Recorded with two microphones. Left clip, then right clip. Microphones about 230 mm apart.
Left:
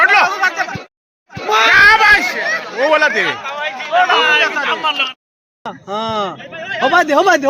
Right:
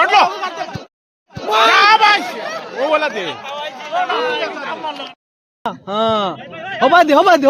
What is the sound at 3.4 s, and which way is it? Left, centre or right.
Chatter, right.